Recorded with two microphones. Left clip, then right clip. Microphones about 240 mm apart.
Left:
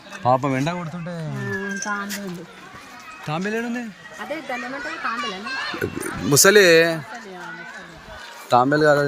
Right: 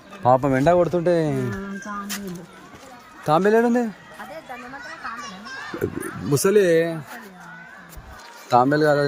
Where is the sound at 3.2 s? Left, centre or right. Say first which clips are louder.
Right 9 dB; right.